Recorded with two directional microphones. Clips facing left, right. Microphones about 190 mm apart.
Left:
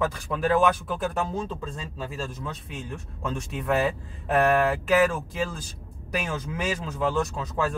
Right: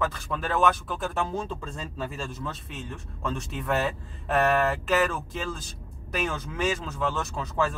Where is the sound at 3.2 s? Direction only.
10° left (ahead or behind).